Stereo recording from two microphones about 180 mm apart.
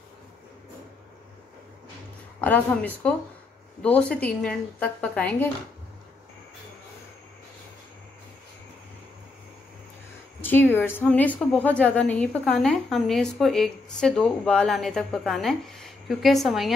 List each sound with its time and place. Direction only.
2.4 s speech: 10° left (ahead or behind)
10.4 s a woman's voice: 10° left (ahead or behind)